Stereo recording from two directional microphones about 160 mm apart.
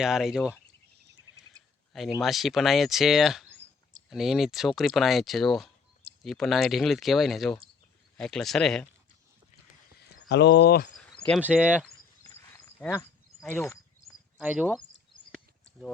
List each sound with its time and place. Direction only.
0.0 s speech: 5° right (ahead or behind)
1.5 s a sound: 20° right (ahead or behind)
1.9 s speech: centre (ahead or behind)
10.2 s speech: 90° left
11.3 s speech: 10° right (ahead or behind)
12.8 s speech: 15° left (ahead or behind)
14.4 s speech: 10° right (ahead or behind)